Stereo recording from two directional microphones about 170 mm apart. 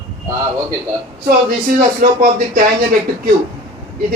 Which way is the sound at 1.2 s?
60° right (ahead or behind).